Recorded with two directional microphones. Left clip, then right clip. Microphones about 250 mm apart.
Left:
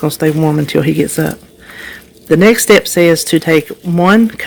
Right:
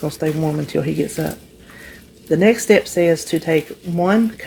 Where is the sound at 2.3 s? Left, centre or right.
Left.